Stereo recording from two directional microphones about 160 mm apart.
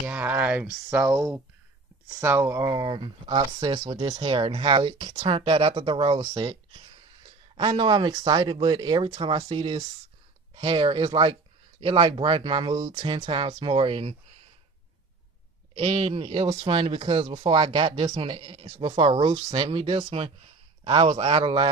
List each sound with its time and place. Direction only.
0.0 s a sound: 10° right (ahead or behind)
0.9 s speech: 5° right (ahead or behind)
2.2 s speech: 15° right (ahead or behind); by 14.1 s 35° right (ahead or behind)
15.7 s speech: 35° right (ahead or behind)